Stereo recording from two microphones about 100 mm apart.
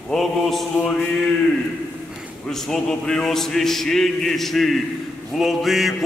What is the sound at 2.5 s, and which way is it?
Chant, 5° left (ahead or behind).